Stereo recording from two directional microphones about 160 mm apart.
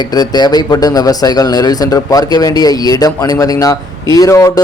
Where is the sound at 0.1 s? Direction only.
25° left (ahead or behind).